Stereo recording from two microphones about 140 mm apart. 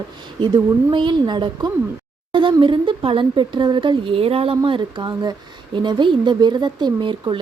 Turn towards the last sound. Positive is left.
turn(degrees=-35)  # may be behind; listen again after turning